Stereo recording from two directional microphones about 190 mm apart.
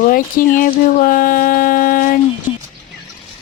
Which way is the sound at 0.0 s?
45° left (ahead or behind).